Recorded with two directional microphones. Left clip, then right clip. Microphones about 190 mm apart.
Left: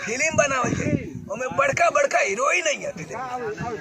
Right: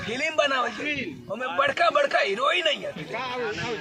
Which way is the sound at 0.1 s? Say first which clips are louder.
Left 3 dB; 20° left (ahead or behind).